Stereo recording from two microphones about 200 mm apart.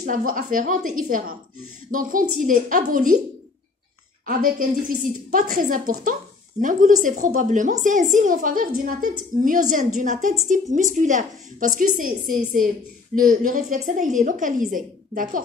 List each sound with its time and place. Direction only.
0.0 s a woman's voice: 40° right (ahead or behind)
4.3 s a woman's voice: 45° right (ahead or behind)